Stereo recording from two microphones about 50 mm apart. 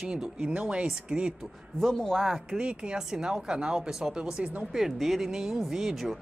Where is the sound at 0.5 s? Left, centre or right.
Right.